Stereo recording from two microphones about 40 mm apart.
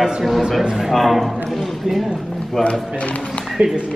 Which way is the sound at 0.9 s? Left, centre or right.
Centre.